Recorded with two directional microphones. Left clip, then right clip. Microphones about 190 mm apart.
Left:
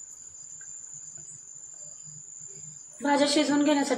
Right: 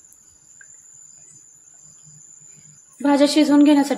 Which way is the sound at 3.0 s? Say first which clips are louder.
Right 7 dB; 55° right (ahead or behind).